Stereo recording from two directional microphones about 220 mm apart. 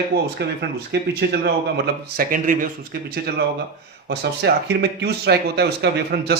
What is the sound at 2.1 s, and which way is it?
Speech, 40° right (ahead or behind).